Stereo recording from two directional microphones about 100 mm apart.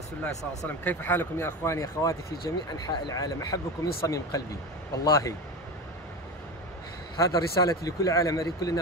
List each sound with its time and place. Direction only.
0.7 s speech: 20° left (ahead or behind)
7.2 s speech: 35° left (ahead or behind)